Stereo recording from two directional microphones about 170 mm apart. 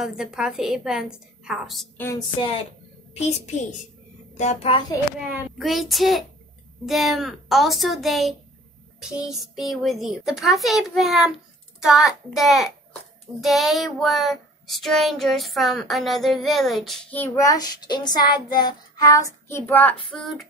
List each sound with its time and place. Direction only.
0.0 s child singing: 5° right (ahead or behind)
2.0 s a sound: 15° left (ahead or behind)
4.4 s a child's voice: 40° left (ahead or behind)
5.6 s child singing: centre (ahead or behind)